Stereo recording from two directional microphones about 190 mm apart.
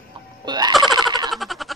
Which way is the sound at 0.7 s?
Centre (ahead or behind).